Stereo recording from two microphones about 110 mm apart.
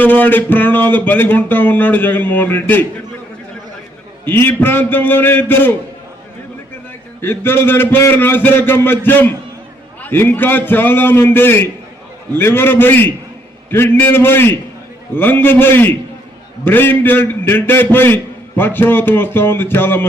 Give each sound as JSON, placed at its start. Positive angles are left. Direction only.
{"t": 0.0, "sound": "speech", "side_deg": 15}
{"t": 4.3, "sound": "a man's voice", "side_deg": 20}
{"t": 7.2, "sound": "a man's voice", "side_deg": 20}